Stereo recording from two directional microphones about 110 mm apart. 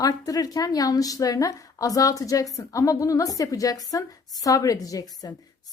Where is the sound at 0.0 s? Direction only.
35° left (ahead or behind).